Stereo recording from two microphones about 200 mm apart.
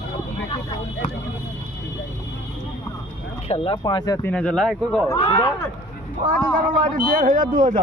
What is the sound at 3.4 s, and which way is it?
Speech, 30° left (ahead or behind).